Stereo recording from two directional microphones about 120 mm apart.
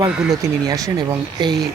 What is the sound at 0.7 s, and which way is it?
Speech, 30° right (ahead or behind).